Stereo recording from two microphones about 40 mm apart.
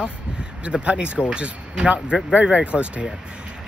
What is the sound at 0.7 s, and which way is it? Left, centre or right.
Speech, right.